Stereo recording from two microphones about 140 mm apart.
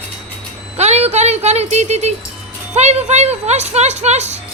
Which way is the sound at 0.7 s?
50° right (ahead or behind).